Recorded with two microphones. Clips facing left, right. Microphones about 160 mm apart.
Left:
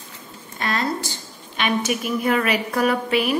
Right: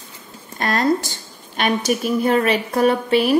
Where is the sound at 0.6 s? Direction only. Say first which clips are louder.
Right 6 dB; 45° right (ahead or behind).